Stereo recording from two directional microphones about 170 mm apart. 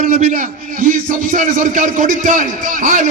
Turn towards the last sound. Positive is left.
turn(degrees=-50)  # may be behind; listen again after turning